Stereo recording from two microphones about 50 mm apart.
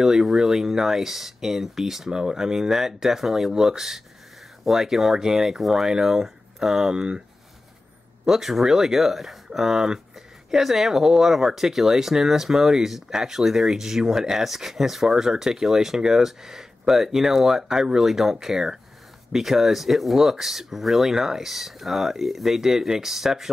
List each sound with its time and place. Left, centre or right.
0.0 s speech: centre
8.3 s speech: centre